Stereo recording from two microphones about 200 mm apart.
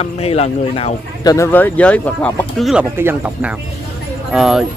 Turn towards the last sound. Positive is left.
turn(degrees=-5)  # may be behind; listen again after turning